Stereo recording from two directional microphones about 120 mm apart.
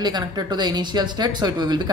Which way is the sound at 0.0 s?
35° right (ahead or behind).